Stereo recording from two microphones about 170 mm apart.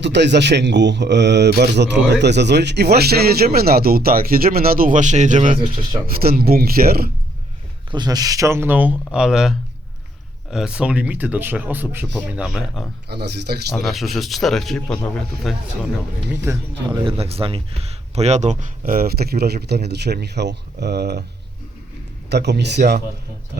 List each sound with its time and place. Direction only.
0.0 s a man's voice: 90° right; by 5.5 s 45° right (ahead or behind)
6.1 s speech: 60° right (ahead or behind)
7.9 s speech: 25° right (ahead or behind); by 12.8 s 5° right (ahead or behind)
13.1 s a man's voice: 75° right (ahead or behind)
13.7 s speech: centre (ahead or behind)
16.3 s speech: 15° right (ahead or behind)
17.0 s speech: 35° right (ahead or behind); by 21.2 s 75° right (ahead or behind)
22.3 s speech: 80° right